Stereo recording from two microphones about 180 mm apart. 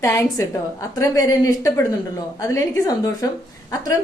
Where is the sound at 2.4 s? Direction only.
20° left (ahead or behind).